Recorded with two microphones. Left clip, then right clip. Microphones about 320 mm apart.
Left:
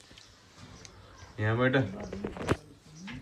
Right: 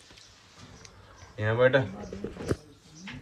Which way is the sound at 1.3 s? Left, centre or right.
Centre.